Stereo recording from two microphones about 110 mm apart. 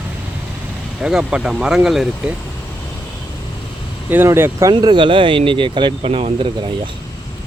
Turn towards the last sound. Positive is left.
turn(degrees=-55)  # may be behind; listen again after turning